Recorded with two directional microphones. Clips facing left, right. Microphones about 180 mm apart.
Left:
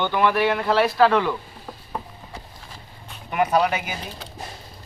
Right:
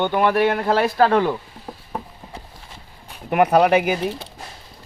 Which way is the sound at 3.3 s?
60° right (ahead or behind).